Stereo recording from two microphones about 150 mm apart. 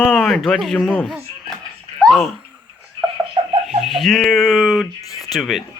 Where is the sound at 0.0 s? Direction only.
5° left (ahead or behind).